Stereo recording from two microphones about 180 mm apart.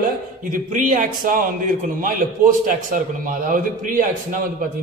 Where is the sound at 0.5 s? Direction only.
45° right (ahead or behind).